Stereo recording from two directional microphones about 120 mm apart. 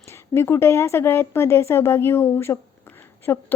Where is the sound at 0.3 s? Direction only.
20° left (ahead or behind).